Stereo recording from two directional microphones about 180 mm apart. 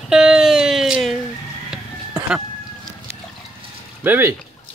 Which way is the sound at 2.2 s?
5° right (ahead or behind).